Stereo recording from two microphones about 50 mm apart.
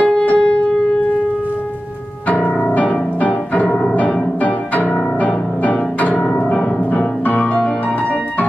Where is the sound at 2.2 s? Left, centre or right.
Left.